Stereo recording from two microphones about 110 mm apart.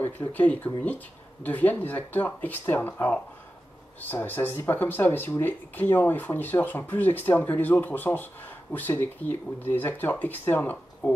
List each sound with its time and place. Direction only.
0.0 s speech: 15° left (ahead or behind)